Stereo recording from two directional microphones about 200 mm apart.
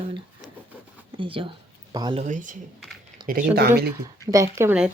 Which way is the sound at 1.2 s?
25° right (ahead or behind).